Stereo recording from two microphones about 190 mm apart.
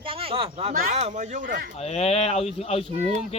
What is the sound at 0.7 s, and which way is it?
Speech, 45° right (ahead or behind).